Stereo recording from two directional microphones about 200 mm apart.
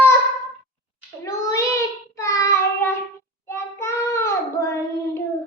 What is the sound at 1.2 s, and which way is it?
Child singing, 15° left (ahead or behind).